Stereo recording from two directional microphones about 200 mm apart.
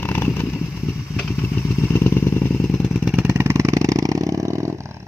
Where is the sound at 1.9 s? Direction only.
10° left (ahead or behind).